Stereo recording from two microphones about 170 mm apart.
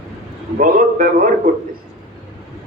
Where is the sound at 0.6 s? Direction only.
55° right (ahead or behind).